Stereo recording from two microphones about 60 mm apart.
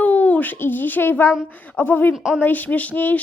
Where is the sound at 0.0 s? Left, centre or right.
Left.